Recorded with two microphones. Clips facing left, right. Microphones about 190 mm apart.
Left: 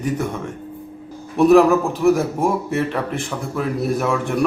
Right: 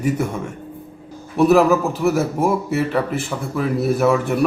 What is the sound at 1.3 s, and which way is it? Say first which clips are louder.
A man's voice: left 1 dB; centre (ahead or behind).